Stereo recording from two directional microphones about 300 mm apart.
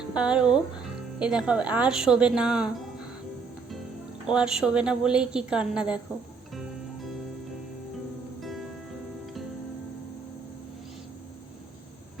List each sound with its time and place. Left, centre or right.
0.1 s a woman's voice: centre
4.3 s a woman's voice: centre
8.4 s music: centre